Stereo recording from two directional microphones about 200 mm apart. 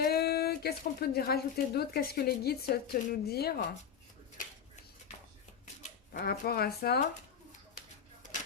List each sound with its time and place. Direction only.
0.0 s speech: 50° left (ahead or behind)
6.1 s speech: 50° left (ahead or behind)
7.8 s a sound: 40° left (ahead or behind)